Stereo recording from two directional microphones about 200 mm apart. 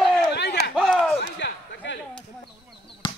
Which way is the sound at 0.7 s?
5° left (ahead or behind).